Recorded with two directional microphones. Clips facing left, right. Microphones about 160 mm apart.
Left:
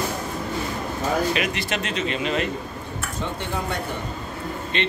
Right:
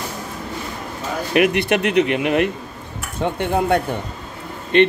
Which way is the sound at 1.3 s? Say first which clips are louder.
Right 9 dB; 60° right (ahead or behind).